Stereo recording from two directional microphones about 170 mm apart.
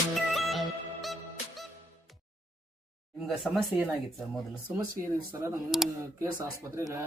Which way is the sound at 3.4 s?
Centre (ahead or behind).